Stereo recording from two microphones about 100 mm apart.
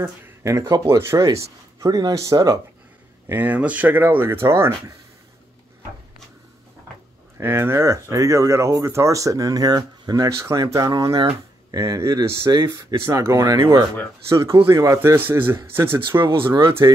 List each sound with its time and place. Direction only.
0.4 s speech: 30° right (ahead or behind)
3.3 s speech: 15° right (ahead or behind)
7.3 s speech: 25° right (ahead or behind)
16.2 s speech: 55° right (ahead or behind)
16.6 s speech: 25° right (ahead or behind)